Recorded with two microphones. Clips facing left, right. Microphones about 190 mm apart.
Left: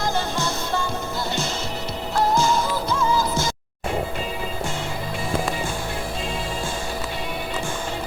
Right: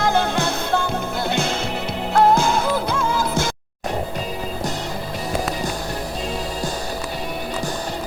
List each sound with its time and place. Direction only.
0.0 s music: 60° right (ahead or behind)